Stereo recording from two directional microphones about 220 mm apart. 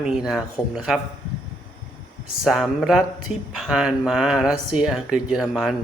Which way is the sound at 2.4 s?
Centre (ahead or behind).